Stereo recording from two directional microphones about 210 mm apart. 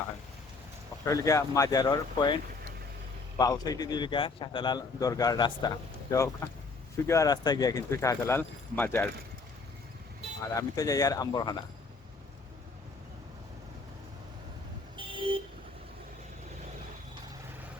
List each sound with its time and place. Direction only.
1.0 s a man's voice: 15° left (ahead or behind)
10.5 s speech: 15° left (ahead or behind)
14.9 s vehicle: 25° right (ahead or behind)